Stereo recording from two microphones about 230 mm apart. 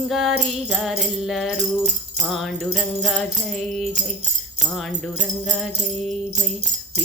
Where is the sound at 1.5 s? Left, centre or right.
Right.